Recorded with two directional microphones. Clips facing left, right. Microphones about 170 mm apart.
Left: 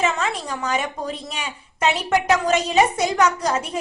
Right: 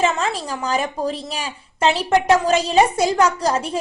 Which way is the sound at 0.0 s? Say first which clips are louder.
Right 3 dB; 30° right (ahead or behind).